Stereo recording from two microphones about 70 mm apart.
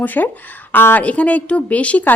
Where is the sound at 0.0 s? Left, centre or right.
Left.